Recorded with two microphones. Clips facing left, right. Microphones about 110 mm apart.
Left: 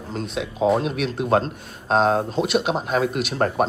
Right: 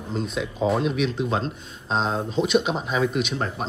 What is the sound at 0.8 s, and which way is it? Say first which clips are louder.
Speech: even; 50° left (ahead or behind).